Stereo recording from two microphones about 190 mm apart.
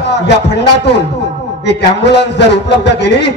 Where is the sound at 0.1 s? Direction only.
65° left (ahead or behind).